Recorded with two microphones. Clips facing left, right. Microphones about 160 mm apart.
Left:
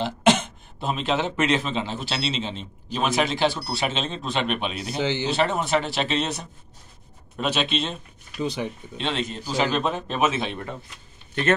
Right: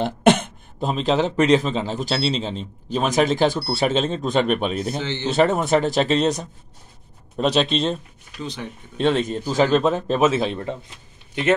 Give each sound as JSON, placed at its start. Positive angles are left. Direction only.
{"t": 0.0, "sound": "throat clearing", "side_deg": -55}
{"t": 0.8, "sound": "a man's voice", "side_deg": -35}
{"t": 8.4, "sound": "speech", "side_deg": 15}
{"t": 8.9, "sound": "a man's voice", "side_deg": -50}